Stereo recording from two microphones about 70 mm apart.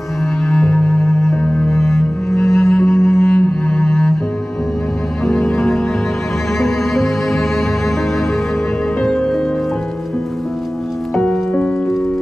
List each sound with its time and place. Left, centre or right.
0.7 s music: centre
1.7 s cello: centre
3.3 s cello: centre
5.2 s music: centre
9.0 s music: centre